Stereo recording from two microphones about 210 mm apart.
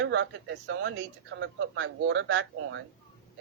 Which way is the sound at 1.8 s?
60° right (ahead or behind).